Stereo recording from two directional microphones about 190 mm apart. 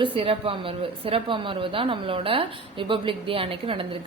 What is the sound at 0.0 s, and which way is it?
A woman's voice, 30° right (ahead or behind).